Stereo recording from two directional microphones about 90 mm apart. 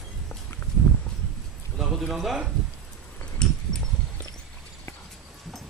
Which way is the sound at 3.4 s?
10° left (ahead or behind).